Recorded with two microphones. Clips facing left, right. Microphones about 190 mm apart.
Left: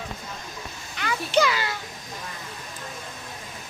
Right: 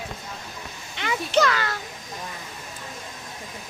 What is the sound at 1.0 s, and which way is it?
Speech, 25° right (ahead or behind).